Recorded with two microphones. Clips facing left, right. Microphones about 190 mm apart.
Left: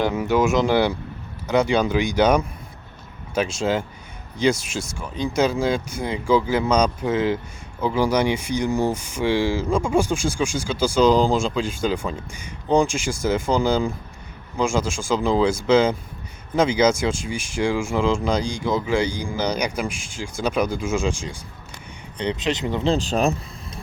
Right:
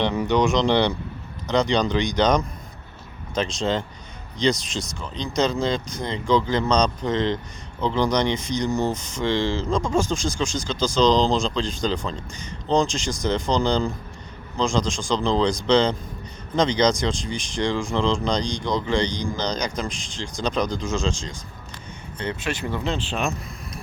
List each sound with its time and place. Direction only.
0.0 s speech: 5° left (ahead or behind); by 22.9 s 20° left (ahead or behind)
22.9 s speech: 40° left (ahead or behind)